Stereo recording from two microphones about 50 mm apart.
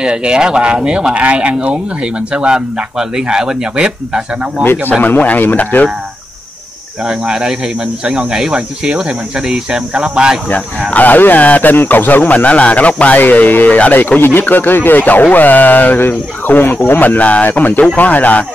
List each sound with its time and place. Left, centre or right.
0.0 s a man's voice: centre
5.0 s speech: left
7.1 s a man's voice: centre
10.9 s speech: left
11.7 s speech: left